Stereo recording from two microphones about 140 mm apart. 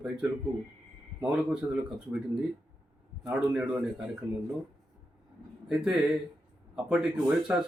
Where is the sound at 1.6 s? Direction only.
20° right (ahead or behind).